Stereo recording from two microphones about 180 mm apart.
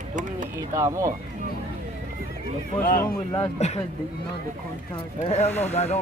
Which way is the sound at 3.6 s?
40° left (ahead or behind).